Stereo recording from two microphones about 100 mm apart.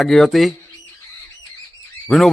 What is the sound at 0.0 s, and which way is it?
Speech, centre (ahead or behind).